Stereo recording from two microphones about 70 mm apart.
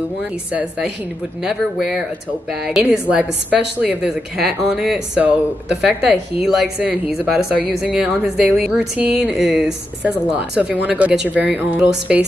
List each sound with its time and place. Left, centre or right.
0.5 s speech: centre
4.4 s speech: centre
5.2 s speech: centre
5.9 s speech: centre